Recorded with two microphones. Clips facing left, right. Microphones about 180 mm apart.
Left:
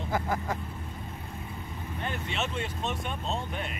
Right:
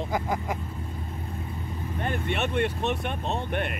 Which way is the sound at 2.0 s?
55° right (ahead or behind).